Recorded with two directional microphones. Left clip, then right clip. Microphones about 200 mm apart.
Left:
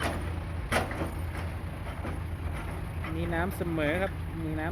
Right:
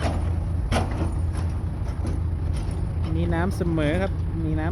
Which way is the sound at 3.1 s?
5° right (ahead or behind).